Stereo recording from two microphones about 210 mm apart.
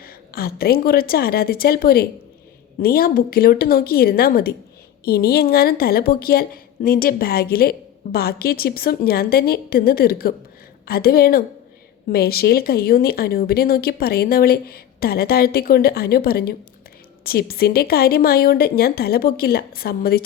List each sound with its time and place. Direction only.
0.0 s a woman's voice: 45° left (ahead or behind)